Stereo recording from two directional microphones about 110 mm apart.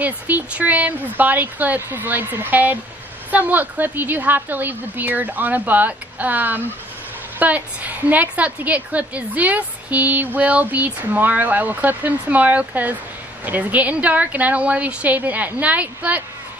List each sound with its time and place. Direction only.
0.0 s a woman's voice: 15° right (ahead or behind)